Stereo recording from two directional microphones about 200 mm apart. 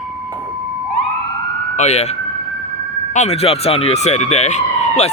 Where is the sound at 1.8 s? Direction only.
35° left (ahead or behind).